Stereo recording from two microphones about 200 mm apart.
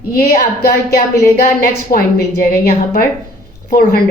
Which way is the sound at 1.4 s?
45° left (ahead or behind).